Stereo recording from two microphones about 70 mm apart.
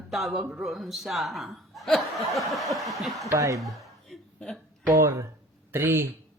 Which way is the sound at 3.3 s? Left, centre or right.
Right.